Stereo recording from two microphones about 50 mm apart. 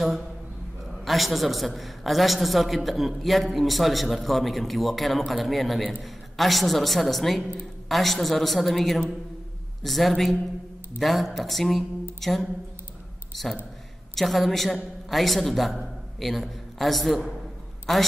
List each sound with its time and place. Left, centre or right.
1.0 s a man's voice: centre